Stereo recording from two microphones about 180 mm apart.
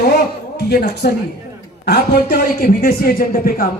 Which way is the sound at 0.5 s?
65° left (ahead or behind).